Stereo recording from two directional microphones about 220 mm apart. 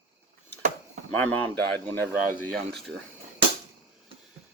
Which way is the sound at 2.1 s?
Centre (ahead or behind).